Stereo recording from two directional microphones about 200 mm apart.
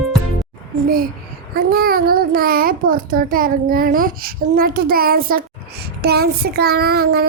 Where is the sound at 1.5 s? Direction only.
50° right (ahead or behind).